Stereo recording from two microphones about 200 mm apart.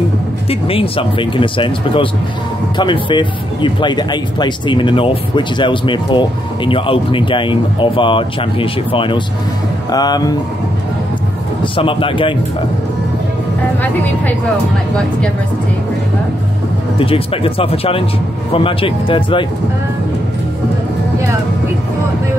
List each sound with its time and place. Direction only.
0.5 s speech: 30° left (ahead or behind)
11.6 s speech: 25° left (ahead or behind)
17.0 s speech: 30° left (ahead or behind)